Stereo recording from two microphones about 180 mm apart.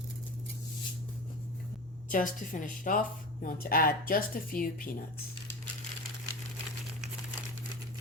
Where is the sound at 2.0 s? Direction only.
50° left (ahead or behind).